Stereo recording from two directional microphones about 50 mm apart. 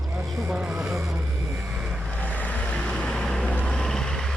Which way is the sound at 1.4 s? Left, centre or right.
Right.